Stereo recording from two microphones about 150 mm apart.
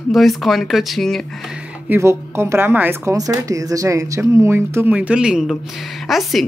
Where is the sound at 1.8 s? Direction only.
15° right (ahead or behind).